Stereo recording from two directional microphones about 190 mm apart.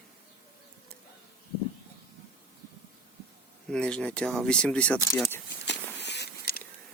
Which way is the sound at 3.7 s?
5° left (ahead or behind).